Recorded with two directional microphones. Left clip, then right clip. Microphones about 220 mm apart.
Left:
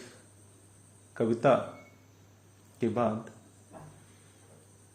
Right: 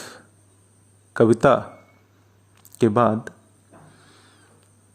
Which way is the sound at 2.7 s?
50° right (ahead or behind).